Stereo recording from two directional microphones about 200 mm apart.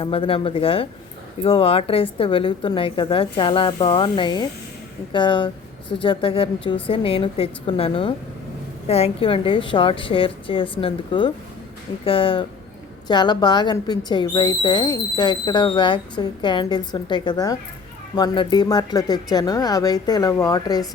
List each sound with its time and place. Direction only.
0.0 s speech: 25° left (ahead or behind)